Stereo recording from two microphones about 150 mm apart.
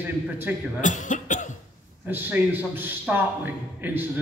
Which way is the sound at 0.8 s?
55° left (ahead or behind).